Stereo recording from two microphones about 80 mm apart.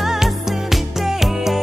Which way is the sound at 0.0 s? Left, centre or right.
Centre.